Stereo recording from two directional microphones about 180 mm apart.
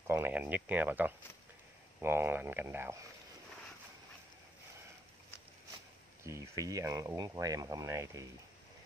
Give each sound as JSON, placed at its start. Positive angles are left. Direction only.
{"t": 0.0, "sound": "speech", "side_deg": -10}
{"t": 6.2, "sound": "speech", "side_deg": -15}